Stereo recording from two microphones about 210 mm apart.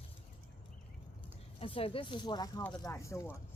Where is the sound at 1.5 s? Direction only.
25° left (ahead or behind).